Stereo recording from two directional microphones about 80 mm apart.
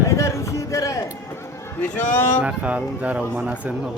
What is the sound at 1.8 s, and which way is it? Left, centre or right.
Speech, left.